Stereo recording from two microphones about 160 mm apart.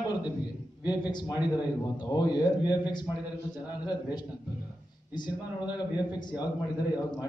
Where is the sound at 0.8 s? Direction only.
25° left (ahead or behind).